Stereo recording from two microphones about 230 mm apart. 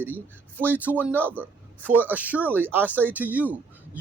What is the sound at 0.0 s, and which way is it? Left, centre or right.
A man's voice, centre.